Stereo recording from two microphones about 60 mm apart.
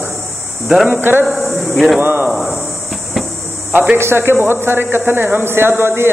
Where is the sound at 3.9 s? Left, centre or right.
Right.